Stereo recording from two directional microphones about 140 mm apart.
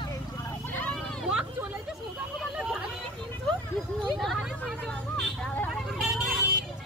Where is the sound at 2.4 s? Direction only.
5° right (ahead or behind).